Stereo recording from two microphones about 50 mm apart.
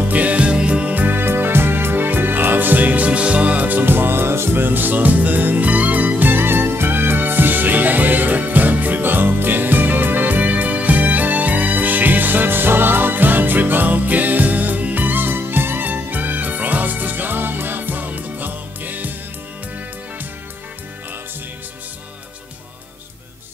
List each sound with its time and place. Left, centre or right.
0.1 s music: right